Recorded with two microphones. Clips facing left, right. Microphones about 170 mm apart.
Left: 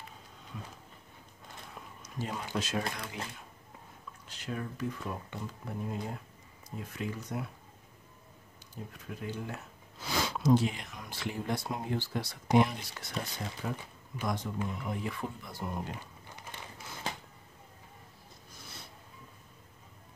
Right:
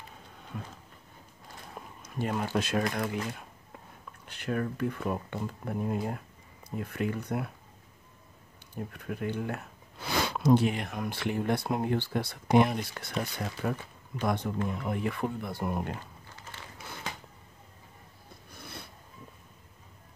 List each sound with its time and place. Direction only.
0.5 s speech: 60° right (ahead or behind)
2.0 s speech: 55° right (ahead or behind)
4.3 s speech: 60° right (ahead or behind)
8.7 s speech: 60° right (ahead or behind)
18.5 s a sound: 60° right (ahead or behind)